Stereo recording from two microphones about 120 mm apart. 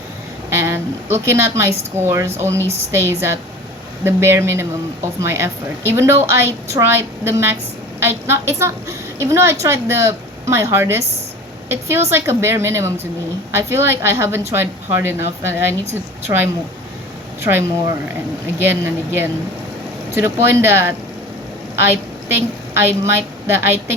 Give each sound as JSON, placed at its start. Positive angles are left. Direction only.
{"t": 1.1, "sound": "a woman's voice", "side_deg": -20}
{"t": 2.6, "sound": "a woman's voice", "side_deg": -60}
{"t": 2.9, "sound": "a woman's voice", "side_deg": -20}
{"t": 22.3, "sound": "a woman's voice", "side_deg": -20}